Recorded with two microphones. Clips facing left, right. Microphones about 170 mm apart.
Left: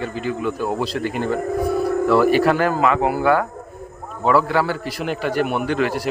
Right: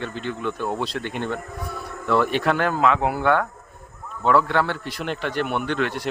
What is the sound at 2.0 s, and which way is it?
A man's voice, 5° left (ahead or behind).